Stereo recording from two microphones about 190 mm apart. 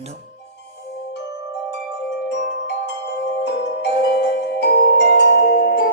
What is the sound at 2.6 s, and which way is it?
Music, 65° left (ahead or behind).